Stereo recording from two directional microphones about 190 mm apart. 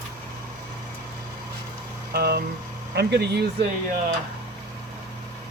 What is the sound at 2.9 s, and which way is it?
Speech, 60° right (ahead or behind).